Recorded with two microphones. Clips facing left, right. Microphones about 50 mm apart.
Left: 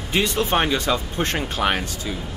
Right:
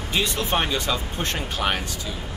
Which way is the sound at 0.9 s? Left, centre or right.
Centre.